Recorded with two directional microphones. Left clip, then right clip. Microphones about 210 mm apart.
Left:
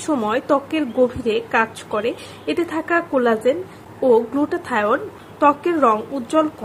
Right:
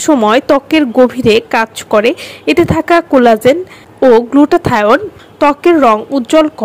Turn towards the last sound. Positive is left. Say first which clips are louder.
# right 9 dB
turn(degrees=-35)  # may be behind; listen again after turning